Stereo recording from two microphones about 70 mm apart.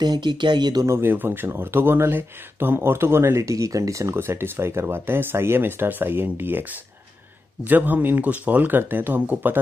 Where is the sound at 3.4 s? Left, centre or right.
Right.